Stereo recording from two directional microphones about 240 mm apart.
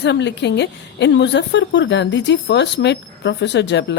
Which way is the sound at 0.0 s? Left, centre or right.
Left.